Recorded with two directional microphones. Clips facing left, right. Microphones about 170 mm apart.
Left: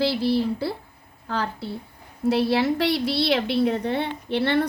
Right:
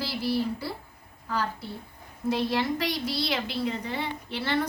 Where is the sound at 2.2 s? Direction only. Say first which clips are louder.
Left 6 dB; 70° left (ahead or behind).